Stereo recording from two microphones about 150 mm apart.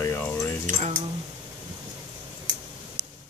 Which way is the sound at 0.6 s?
55° right (ahead or behind).